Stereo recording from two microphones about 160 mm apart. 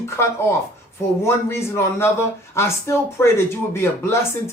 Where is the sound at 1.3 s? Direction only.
15° left (ahead or behind).